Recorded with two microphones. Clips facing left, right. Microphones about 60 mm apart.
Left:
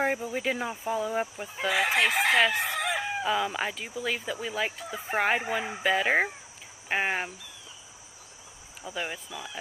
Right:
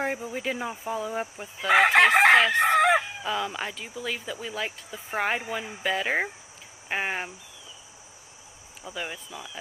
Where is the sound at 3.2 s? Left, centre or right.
Centre.